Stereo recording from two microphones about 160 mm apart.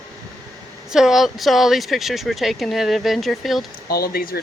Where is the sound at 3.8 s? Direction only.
70° left (ahead or behind).